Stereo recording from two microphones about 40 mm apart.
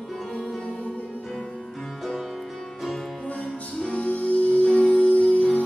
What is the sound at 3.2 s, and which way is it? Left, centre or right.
Music, left.